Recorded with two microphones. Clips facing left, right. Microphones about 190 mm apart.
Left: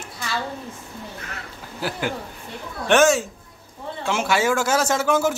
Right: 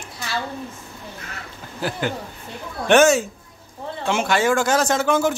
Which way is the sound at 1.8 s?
5° left (ahead or behind).